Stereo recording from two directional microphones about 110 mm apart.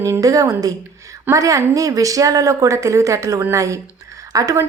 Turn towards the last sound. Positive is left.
turn(degrees=-30)  # may be behind; listen again after turning